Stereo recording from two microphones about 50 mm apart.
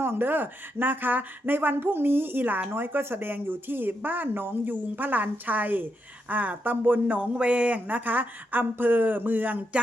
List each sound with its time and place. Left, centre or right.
0.0 s speech: right
7.1 s speech: right
7.9 s speech: right